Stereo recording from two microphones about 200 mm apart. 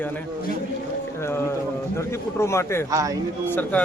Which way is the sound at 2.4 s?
15° left (ahead or behind).